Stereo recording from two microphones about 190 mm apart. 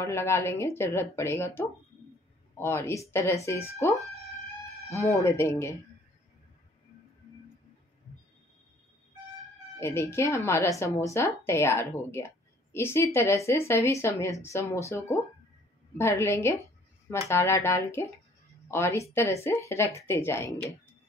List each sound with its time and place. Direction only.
0.0 s a woman's voice: 15° left (ahead or behind)
9.8 s a woman's voice: 15° left (ahead or behind)